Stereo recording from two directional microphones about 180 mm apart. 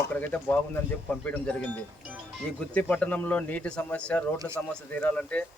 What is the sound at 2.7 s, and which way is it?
Speech, 10° left (ahead or behind).